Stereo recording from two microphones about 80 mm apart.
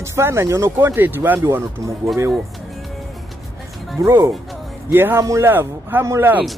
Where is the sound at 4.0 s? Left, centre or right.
Right.